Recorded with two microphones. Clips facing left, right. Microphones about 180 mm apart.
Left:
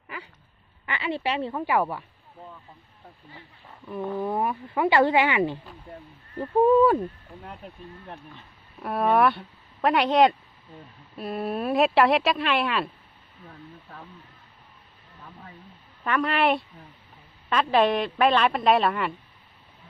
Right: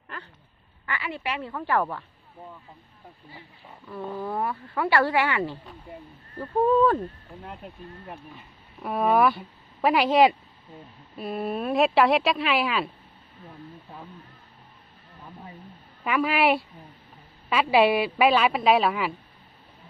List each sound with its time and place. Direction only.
0.9 s speech: 25° left (ahead or behind)
1.6 s speech: 10° left (ahead or behind)
3.8 s speech: 15° left (ahead or behind)
5.9 s speech: centre (ahead or behind)
6.6 s speech: 10° left (ahead or behind)
7.4 s speech: 5° right (ahead or behind)
13.5 s speech: 15° right (ahead or behind)
15.2 s speech: 20° right (ahead or behind)
16.0 s speech: 5° right (ahead or behind)